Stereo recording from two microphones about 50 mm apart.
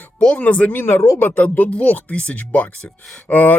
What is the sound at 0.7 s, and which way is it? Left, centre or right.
Speech, left.